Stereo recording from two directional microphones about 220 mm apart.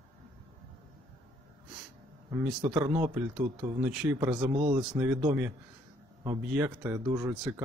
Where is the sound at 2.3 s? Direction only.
20° right (ahead or behind).